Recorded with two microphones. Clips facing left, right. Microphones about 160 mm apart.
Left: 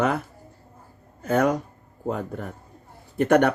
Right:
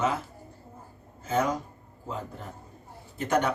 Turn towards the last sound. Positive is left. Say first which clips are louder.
# left 8 dB
turn(degrees=60)  # may be behind; listen again after turning